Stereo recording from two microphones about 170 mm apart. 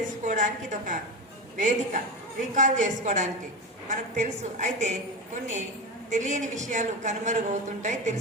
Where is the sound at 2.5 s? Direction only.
45° right (ahead or behind).